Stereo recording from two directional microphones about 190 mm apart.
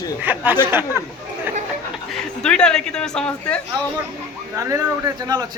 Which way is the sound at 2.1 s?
5° left (ahead or behind).